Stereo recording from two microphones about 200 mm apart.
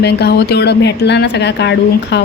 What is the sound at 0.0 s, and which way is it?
Speech, 55° left (ahead or behind).